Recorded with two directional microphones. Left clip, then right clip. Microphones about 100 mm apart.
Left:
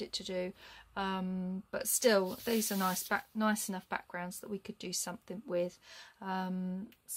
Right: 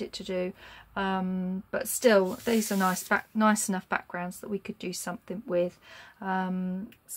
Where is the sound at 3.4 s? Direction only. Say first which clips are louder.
Right 9 dB; 5° left (ahead or behind).